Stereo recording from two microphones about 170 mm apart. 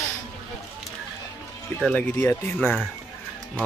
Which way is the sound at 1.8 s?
5° left (ahead or behind).